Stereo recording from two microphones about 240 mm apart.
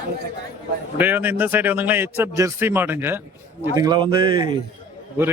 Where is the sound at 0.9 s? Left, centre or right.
Centre.